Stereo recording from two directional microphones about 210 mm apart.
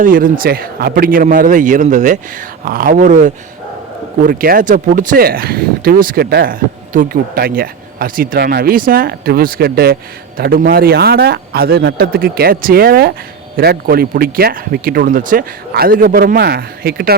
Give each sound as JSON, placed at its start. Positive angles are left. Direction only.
{"t": 0.0, "sound": "a man's voice", "side_deg": -40}